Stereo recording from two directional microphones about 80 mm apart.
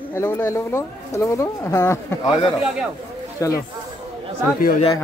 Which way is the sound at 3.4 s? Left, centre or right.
Left.